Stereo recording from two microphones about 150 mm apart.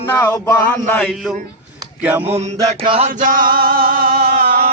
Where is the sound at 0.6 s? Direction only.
10° left (ahead or behind).